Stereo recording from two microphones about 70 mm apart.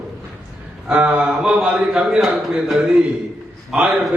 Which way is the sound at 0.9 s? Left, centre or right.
Centre.